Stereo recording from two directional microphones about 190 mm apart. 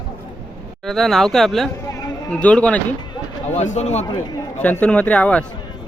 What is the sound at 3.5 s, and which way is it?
Speech, 35° left (ahead or behind).